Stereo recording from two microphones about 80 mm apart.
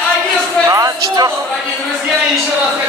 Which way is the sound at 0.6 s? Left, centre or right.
Right.